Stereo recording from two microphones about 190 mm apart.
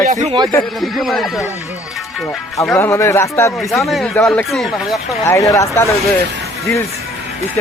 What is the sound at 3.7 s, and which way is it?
Speech, centre (ahead or behind).